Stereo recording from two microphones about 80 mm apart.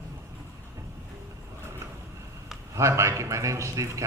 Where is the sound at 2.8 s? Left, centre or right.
Right.